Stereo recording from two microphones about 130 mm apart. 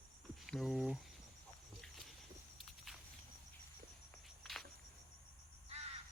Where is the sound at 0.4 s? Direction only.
Centre (ahead or behind).